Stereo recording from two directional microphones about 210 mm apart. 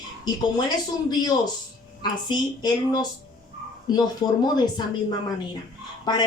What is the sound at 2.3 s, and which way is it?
Speech, 20° left (ahead or behind).